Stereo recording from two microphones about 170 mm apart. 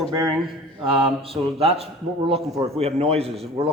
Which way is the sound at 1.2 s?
35° right (ahead or behind).